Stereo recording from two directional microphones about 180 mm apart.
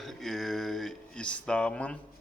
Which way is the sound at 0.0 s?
Centre (ahead or behind).